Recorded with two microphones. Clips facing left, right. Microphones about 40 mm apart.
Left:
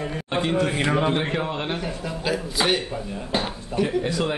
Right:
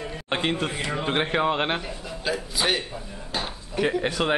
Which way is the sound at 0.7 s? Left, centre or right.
Left.